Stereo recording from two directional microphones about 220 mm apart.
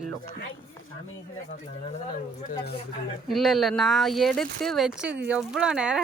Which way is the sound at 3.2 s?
Centre (ahead or behind).